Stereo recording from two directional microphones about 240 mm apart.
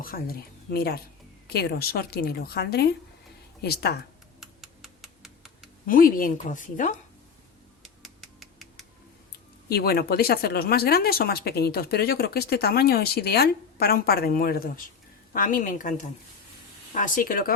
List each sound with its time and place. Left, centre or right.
0.0 s speech: left
4.4 s computer keyboard: centre
5.8 s speech: left
7.8 s music: centre
9.6 s speech: left